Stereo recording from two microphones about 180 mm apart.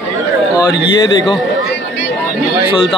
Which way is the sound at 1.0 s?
25° left (ahead or behind).